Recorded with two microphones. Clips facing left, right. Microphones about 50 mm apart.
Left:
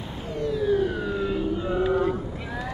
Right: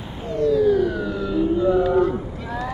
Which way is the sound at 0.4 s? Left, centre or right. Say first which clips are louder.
Right 6 dB; left.